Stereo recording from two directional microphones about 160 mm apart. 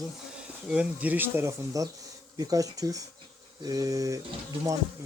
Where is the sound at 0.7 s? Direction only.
10° right (ahead or behind).